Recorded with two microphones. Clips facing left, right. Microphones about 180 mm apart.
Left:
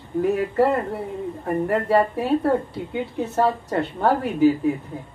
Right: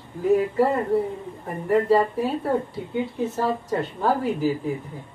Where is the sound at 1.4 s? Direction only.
65° left (ahead or behind).